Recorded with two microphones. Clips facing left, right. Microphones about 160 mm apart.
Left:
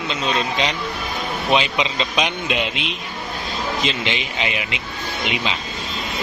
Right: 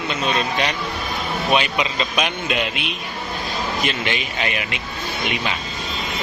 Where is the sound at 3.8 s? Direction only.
20° left (ahead or behind).